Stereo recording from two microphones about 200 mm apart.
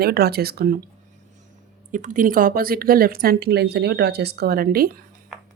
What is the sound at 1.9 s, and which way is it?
Speech, 40° right (ahead or behind).